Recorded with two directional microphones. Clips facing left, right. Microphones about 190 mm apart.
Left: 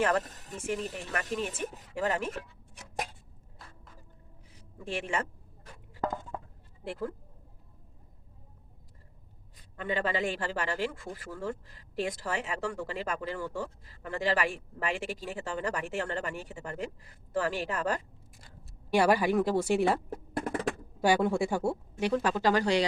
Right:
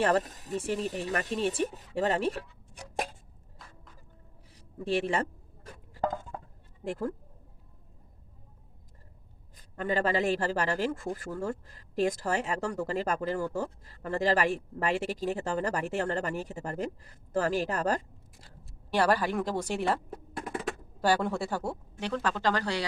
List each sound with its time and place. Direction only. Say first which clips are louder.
0.0 s a man's voice: right 2 dB; 35° right (ahead or behind)
4.8 s a man's voice: right 5 dB; 35° right (ahead or behind)
6.8 s speech: right 3 dB; 45° right (ahead or behind)
9.6 s a man's voice: right 3 dB; 40° right (ahead or behind)
18.9 s speech: left 2 dB; 10° left (ahead or behind)
21.0 s speech: left 2 dB; 10° left (ahead or behind)